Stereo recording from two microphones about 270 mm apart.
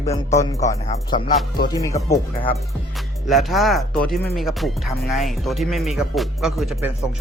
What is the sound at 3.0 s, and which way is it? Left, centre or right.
Speech, centre.